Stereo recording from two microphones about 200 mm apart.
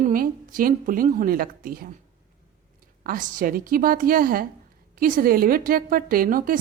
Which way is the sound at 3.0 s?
45° right (ahead or behind).